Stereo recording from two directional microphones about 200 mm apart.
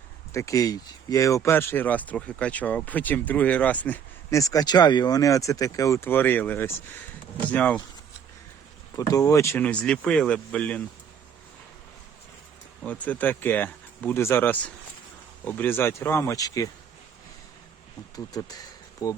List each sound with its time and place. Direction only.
0.3 s speech: 15° left (ahead or behind)
9.0 s speech: 15° left (ahead or behind)
12.8 s speech: 5° left (ahead or behind)
18.3 s insect: 20° left (ahead or behind)